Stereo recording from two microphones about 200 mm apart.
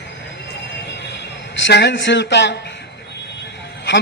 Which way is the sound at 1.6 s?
60° left (ahead or behind).